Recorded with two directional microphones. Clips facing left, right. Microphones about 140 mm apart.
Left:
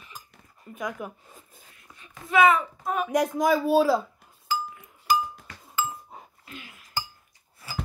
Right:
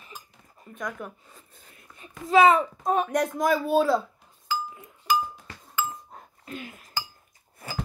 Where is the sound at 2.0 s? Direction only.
30° right (ahead or behind).